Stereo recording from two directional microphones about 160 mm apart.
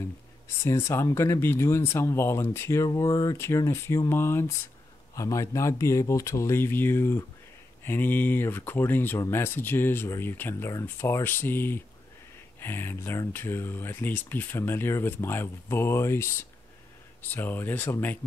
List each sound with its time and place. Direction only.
0.7 s speech: 15° left (ahead or behind)